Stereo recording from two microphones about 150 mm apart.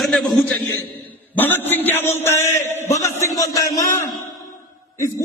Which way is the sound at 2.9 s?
20° left (ahead or behind).